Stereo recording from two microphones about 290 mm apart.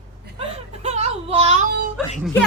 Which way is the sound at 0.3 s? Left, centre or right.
Right.